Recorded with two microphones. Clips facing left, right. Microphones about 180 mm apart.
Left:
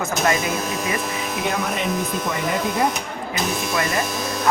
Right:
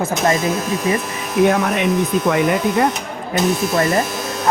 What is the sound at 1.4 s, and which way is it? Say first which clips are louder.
Speech: right 10 dB; 60° right (ahead or behind).